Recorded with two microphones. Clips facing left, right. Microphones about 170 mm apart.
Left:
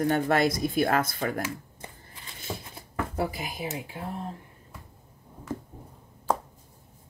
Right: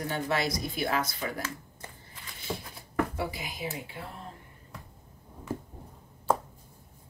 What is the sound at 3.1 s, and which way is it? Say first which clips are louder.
Speech: left 4 dB; 50° left (ahead or behind).